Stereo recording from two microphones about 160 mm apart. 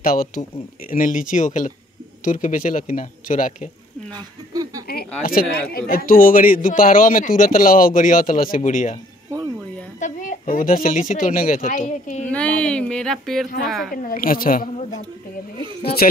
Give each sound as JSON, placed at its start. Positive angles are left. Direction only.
{"t": 0.0, "sound": "speech", "side_deg": 65}
{"t": 5.2, "sound": "speech", "side_deg": 65}
{"t": 9.9, "sound": "a woman's voice", "side_deg": 50}
{"t": 12.3, "sound": "a sound", "side_deg": 10}
{"t": 13.7, "sound": "speech", "side_deg": 0}
{"t": 14.0, "sound": "speech", "side_deg": 60}
{"t": 15.8, "sound": "speech", "side_deg": 80}